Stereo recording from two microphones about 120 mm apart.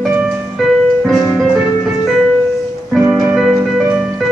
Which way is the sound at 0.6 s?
Centre (ahead or behind).